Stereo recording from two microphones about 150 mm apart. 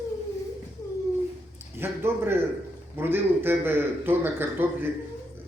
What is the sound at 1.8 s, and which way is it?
A man's voice, 15° right (ahead or behind).